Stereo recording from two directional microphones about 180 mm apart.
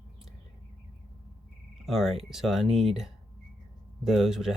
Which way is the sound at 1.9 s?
Centre (ahead or behind).